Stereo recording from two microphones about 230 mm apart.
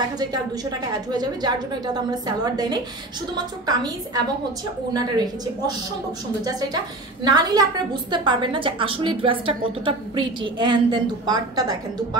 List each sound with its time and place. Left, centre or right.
0.2 s a woman's voice: centre
7.2 s a woman's voice: centre